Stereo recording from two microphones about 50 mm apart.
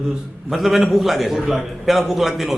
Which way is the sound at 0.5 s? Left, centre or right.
Centre.